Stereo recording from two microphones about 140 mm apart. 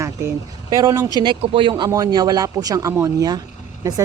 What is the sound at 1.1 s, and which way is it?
A man's voice, 35° right (ahead or behind).